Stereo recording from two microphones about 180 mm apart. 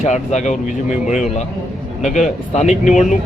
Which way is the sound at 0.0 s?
40° left (ahead or behind).